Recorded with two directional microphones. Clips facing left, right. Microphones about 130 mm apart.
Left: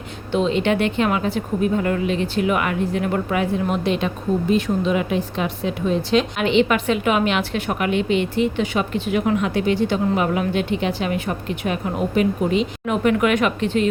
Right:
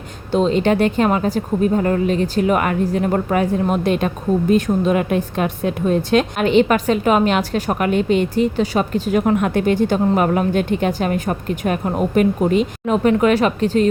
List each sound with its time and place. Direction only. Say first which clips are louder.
0.3 s speech: right 3 dB; 40° right (ahead or behind)
12.8 s speech: right 3 dB; 35° right (ahead or behind)